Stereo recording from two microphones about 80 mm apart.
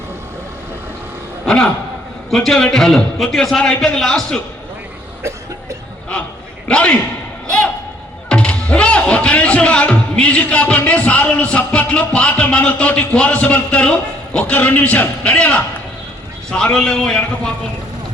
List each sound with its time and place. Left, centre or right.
1.5 s a man's voice: centre
6.7 s a man's voice: centre
8.3 s a man's voice: centre
16.7 s a man's voice: centre